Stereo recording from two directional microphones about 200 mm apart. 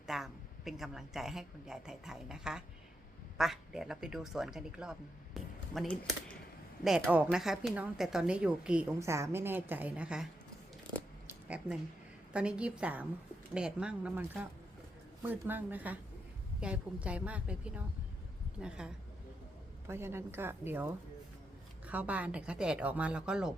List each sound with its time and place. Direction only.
0.1 s a woman's voice: centre (ahead or behind)
11.3 s a sound: 5° right (ahead or behind)
12.3 s a woman's voice: 5° right (ahead or behind)